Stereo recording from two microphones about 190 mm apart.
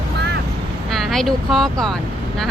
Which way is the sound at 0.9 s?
Centre (ahead or behind).